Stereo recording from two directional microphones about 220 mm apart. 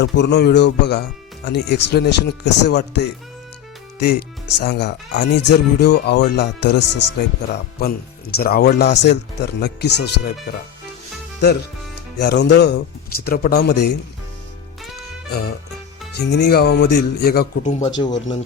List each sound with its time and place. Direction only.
0.2 s speech: 50° left (ahead or behind)
12.2 s speech: 50° left (ahead or behind)
15.3 s speech: 45° left (ahead or behind)
17.7 s speech: 30° left (ahead or behind)
18.0 s speech: 20° left (ahead or behind)